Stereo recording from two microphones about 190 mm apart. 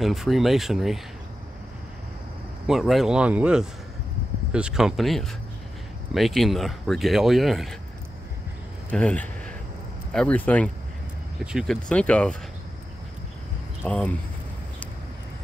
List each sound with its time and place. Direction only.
0.0 s speech: centre (ahead or behind)
2.6 s speech: centre (ahead or behind)
8.9 s speech: 5° left (ahead or behind)
13.8 s speech: 5° left (ahead or behind)